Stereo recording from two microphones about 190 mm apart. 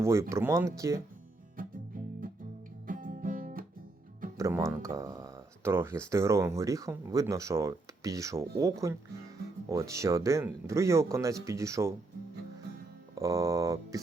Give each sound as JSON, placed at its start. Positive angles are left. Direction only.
{"t": 0.0, "sound": "speech", "side_deg": -15}
{"t": 1.6, "sound": "music", "side_deg": -50}
{"t": 4.4, "sound": "speech", "side_deg": -15}
{"t": 13.1, "sound": "speech", "side_deg": -15}